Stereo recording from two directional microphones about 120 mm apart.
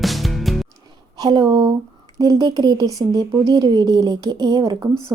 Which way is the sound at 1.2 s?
35° right (ahead or behind).